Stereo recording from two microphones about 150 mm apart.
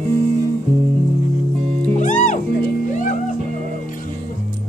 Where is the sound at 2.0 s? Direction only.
55° left (ahead or behind).